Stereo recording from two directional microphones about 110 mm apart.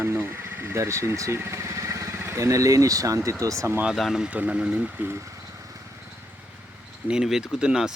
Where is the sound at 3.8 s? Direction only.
5° right (ahead or behind); by 5.2 s 20° right (ahead or behind).